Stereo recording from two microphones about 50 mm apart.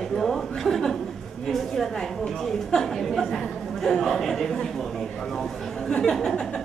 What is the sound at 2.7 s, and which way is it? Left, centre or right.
A woman's voice, centre.